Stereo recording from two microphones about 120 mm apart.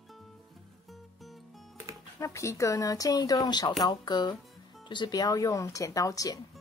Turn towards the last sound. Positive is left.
turn(degrees=30)  # may be behind; listen again after turning